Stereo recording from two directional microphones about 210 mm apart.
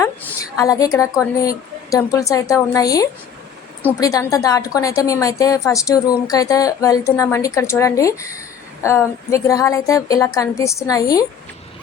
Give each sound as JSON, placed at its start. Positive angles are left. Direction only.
{"t": 0.0, "sound": "a woman's voice", "side_deg": 15}